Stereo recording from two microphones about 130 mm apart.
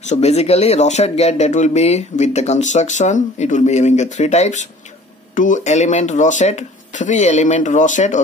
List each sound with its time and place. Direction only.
0.0 s speech: 60° left (ahead or behind)
5.3 s speech: 75° left (ahead or behind)